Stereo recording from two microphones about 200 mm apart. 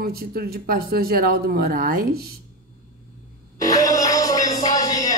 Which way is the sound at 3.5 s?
15° left (ahead or behind).